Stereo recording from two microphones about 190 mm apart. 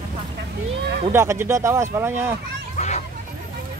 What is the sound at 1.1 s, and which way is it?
Speech, 15° right (ahead or behind).